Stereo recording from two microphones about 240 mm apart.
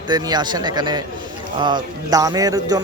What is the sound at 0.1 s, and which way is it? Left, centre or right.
Speech, centre.